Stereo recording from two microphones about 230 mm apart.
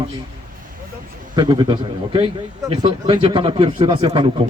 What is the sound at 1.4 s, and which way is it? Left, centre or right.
A man's voice, centre.